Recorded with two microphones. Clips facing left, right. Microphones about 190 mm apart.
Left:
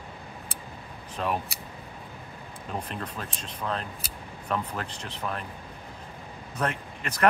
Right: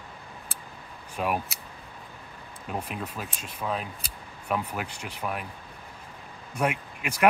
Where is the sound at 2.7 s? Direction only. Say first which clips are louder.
Right 1 dB; 10° right (ahead or behind).